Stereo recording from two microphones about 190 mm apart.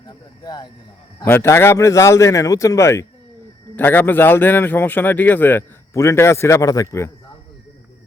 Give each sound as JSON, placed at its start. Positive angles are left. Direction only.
{"t": 0.0, "sound": "a man's voice", "side_deg": 20}